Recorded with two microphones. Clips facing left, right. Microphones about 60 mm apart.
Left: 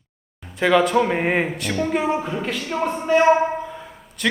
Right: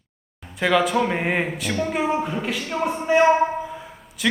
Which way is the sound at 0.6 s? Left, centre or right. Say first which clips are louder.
Left 3 dB; centre.